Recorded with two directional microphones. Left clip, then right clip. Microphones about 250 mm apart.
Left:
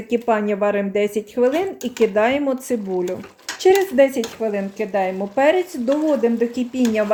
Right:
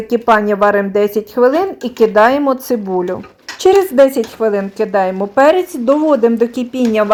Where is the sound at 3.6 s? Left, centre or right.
Right.